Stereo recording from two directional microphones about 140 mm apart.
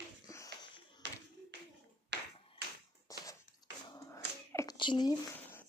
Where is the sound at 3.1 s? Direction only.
25° left (ahead or behind).